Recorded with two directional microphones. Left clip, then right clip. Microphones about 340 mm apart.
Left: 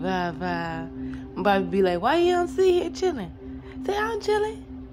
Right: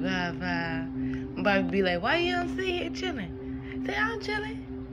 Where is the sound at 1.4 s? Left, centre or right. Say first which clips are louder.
Left 4 dB; centre.